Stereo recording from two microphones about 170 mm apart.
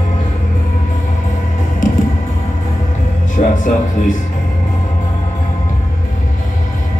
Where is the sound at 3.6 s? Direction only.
50° left (ahead or behind).